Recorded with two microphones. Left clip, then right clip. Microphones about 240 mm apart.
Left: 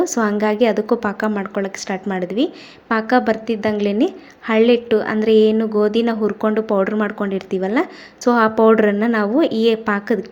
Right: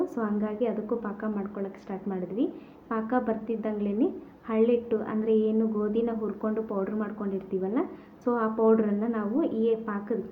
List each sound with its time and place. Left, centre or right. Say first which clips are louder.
0.0 s a woman's voice: left 13 dB; left